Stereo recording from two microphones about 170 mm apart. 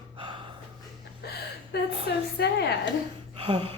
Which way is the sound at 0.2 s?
30° right (ahead or behind).